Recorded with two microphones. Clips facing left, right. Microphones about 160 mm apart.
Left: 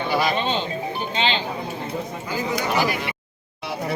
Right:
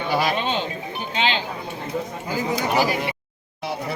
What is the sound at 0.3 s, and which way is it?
Speech, 10° right (ahead or behind).